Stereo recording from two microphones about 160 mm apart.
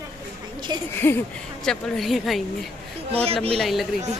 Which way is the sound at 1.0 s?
15° left (ahead or behind).